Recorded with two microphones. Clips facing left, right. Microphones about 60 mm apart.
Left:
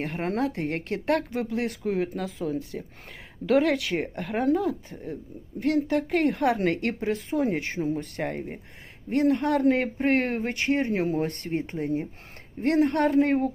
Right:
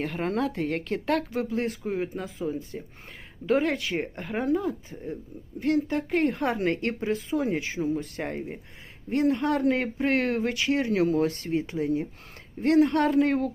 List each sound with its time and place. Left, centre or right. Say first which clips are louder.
0.0 s speech: even; left
11.3 s speech: right 1 dB; left